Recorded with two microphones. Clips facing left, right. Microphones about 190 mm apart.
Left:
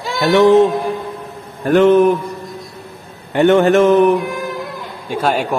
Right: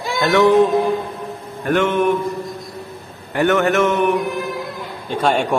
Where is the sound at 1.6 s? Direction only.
35° left (ahead or behind).